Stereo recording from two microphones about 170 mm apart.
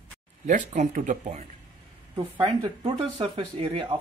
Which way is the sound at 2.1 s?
30° right (ahead or behind).